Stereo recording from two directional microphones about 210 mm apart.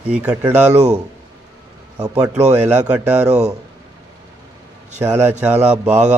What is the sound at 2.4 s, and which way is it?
Speech, 35° right (ahead or behind).